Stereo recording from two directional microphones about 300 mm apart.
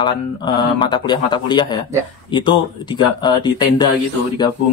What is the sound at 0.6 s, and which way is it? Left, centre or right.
Speech, centre.